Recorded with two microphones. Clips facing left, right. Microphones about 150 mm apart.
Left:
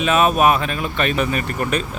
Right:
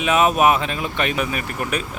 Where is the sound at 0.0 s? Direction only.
15° right (ahead or behind).